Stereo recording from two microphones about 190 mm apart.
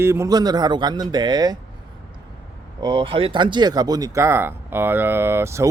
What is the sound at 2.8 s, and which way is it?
Speech, 25° right (ahead or behind).